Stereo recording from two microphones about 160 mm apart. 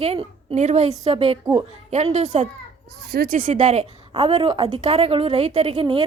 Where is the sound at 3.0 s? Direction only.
70° right (ahead or behind).